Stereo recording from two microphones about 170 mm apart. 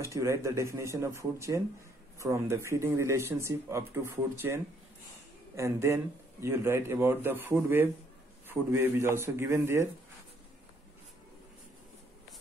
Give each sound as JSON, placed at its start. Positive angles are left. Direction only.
{"t": 0.0, "sound": "speech", "side_deg": -15}
{"t": 5.6, "sound": "speech", "side_deg": -15}